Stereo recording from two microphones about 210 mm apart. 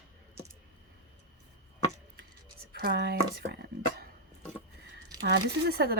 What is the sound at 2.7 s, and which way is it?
Speech, 50° right (ahead or behind).